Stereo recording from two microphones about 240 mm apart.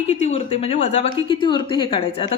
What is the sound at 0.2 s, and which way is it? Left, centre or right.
A woman's voice, left.